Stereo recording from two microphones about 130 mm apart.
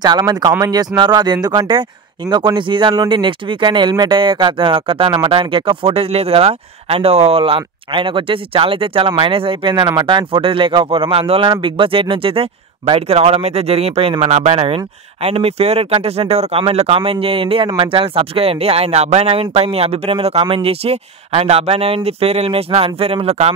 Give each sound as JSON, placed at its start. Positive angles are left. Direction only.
{"t": 0.0, "sound": "speech", "side_deg": -30}